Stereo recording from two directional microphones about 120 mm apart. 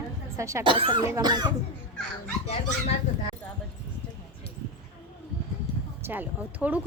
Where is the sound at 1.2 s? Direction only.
35° right (ahead or behind).